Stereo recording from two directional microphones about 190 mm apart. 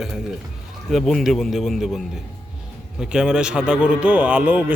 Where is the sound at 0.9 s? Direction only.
Centre (ahead or behind).